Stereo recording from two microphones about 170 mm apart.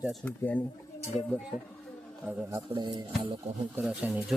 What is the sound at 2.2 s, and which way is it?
Speech, 15° right (ahead or behind).